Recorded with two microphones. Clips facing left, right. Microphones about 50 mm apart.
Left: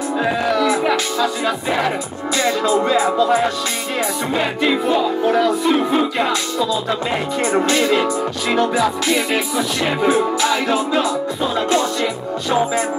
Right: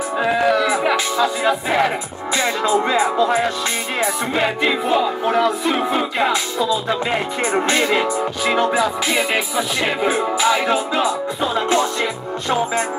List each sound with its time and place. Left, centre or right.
0.2 s music: centre
2.3 s music: right
4.8 s music: centre
7.6 s music: right
9.1 s music: centre